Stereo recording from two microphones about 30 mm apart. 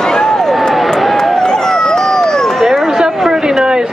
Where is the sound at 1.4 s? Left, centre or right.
Centre.